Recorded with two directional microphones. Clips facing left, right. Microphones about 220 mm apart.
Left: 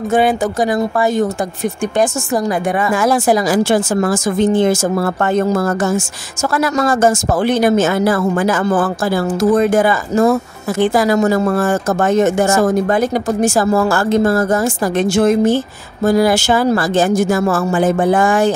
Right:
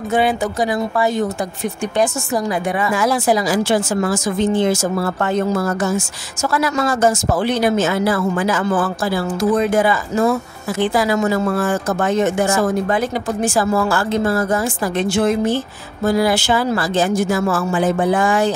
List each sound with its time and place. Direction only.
0.1 s speech: 45° left (ahead or behind)